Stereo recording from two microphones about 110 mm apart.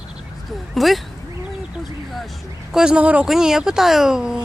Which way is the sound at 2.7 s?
5° right (ahead or behind).